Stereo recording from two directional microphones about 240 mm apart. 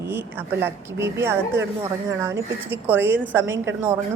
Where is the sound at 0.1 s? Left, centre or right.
Centre.